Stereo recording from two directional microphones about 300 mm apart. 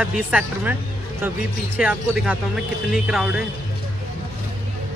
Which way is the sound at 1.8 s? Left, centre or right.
Centre.